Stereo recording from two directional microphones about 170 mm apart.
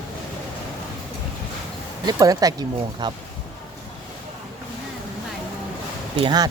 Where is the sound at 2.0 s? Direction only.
20° right (ahead or behind).